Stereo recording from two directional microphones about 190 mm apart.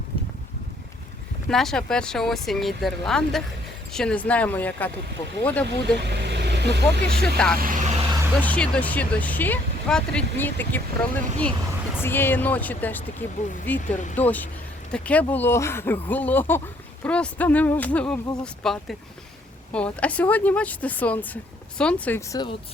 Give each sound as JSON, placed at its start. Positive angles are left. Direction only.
{"t": 1.5, "sound": "speech", "side_deg": 0}
{"t": 6.0, "sound": "speech", "side_deg": -65}
{"t": 7.3, "sound": "speech", "side_deg": 5}
{"t": 7.6, "sound": "vehicle", "side_deg": -40}
{"t": 8.4, "sound": "speech", "side_deg": 5}
{"t": 13.8, "sound": "speech", "side_deg": 40}
{"t": 14.2, "sound": "speech", "side_deg": 10}